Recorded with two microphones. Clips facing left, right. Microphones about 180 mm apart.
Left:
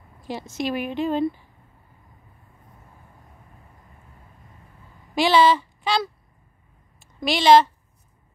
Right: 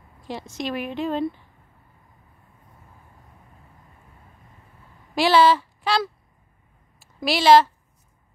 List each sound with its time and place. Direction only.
0.3 s a woman's voice: 5° left (ahead or behind)
5.1 s a sound: centre (ahead or behind)
7.0 s a woman's voice: 5° right (ahead or behind)